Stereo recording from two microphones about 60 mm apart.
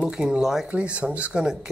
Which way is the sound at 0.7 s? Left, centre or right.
Right.